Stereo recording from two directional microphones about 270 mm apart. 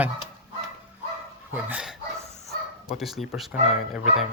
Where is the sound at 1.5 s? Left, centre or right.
Centre.